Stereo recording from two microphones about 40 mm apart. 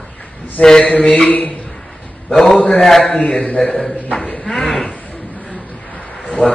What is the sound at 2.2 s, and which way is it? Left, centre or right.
Speech, centre.